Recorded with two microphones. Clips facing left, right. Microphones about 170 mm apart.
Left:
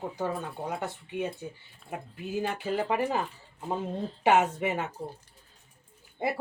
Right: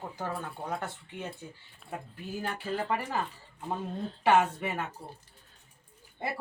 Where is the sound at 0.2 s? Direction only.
15° left (ahead or behind).